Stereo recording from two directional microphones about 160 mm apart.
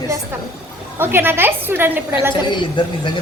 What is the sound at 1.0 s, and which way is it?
A woman's voice, 15° right (ahead or behind).